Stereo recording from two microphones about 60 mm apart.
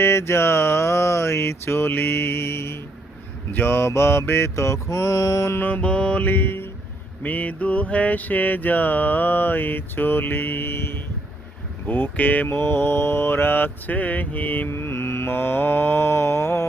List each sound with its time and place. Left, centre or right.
0.0 s mantra: left
5.5 s mantra: left
5.8 s music: centre; by 6.7 s left
7.2 s mantra: left
14.7 s mantra: left